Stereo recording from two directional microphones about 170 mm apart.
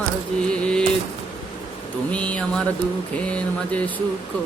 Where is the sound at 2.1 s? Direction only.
5° left (ahead or behind).